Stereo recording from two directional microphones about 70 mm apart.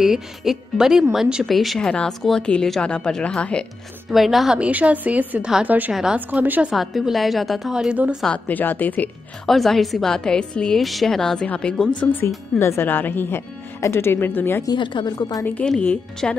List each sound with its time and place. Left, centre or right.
0.0 s a woman's voice: centre
4.1 s a woman's voice: centre
4.6 s a woman's voice: centre
6.7 s a woman's voice: centre
7.9 s speech: centre
8.5 s a woman's voice: left
9.5 s a woman's voice: centre
10.8 s a woman's voice: centre
11.4 s a woman's voice: centre
12.5 s a woman's voice: left
12.8 s a woman's voice: left
14.6 s a woman's voice: left
16.2 s a woman's voice: centre